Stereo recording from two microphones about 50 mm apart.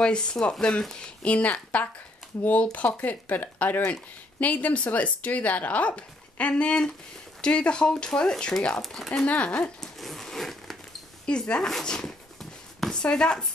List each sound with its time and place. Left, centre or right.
0.0 s speech: centre
1.2 s speech: left
8.8 s speech: centre
9.2 s speech: left
9.8 s crumpling: centre
11.2 s speech: centre
11.8 s dog: centre
13.0 s speech: centre